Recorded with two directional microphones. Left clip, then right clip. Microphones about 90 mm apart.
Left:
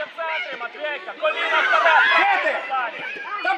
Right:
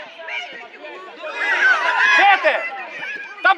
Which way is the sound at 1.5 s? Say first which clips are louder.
Right 2 dB; 20° right (ahead or behind).